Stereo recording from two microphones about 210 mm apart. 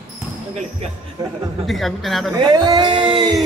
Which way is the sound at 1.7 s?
Centre (ahead or behind).